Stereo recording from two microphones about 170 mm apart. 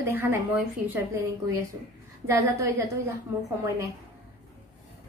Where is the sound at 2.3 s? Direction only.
15° right (ahead or behind).